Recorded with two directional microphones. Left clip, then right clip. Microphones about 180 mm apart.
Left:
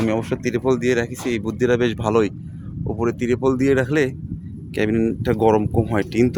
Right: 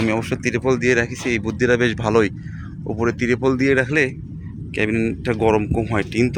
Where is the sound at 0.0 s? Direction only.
10° left (ahead or behind).